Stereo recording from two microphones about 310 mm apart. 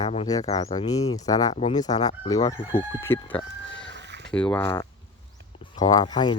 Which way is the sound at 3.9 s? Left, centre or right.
Right.